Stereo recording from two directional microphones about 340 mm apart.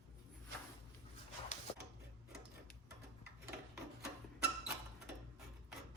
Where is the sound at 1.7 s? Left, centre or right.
Centre.